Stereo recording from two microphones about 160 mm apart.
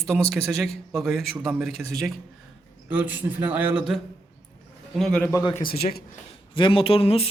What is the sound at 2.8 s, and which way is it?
A man's voice, 10° right (ahead or behind).